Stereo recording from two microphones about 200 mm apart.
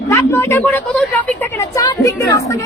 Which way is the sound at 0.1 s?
10° left (ahead or behind).